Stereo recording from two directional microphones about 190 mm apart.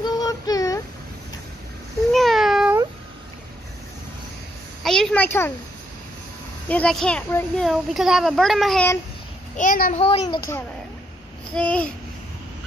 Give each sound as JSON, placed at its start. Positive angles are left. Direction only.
{"t": 0.0, "sound": "child singing", "side_deg": 20}
{"t": 2.1, "sound": "meow", "side_deg": 0}
{"t": 4.8, "sound": "a sound", "side_deg": 0}
{"t": 6.7, "sound": "a child's voice", "side_deg": 5}
{"t": 9.6, "sound": "a child's voice", "side_deg": 45}
{"t": 9.9, "sound": "a child's voice", "side_deg": 30}
{"t": 10.2, "sound": "a child's voice", "side_deg": 20}
{"t": 11.5, "sound": "a child's voice", "side_deg": 5}